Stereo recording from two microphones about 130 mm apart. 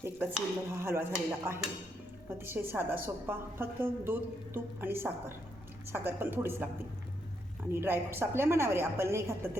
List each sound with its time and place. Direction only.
0.0 s a woman's voice: 15° right (ahead or behind)
2.4 s a woman's voice: 20° right (ahead or behind)
7.7 s a woman's voice: 20° right (ahead or behind)